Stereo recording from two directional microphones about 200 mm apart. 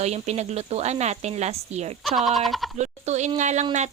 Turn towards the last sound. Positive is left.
turn(degrees=-35)  # may be behind; listen again after turning